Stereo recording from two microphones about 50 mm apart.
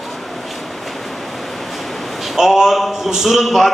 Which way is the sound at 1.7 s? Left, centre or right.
Centre.